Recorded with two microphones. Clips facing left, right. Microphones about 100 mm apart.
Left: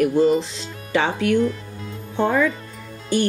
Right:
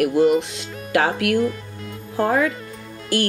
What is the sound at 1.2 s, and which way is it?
Speech, 90° right.